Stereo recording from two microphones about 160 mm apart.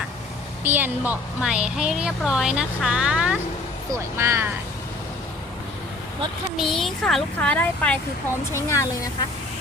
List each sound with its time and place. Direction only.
0.6 s a woman's voice: 10° right (ahead or behind)
6.6 s a child's voice: centre (ahead or behind)
8.5 s speech: 20° left (ahead or behind)